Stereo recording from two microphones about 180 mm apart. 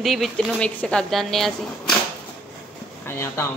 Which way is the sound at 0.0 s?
Centre (ahead or behind).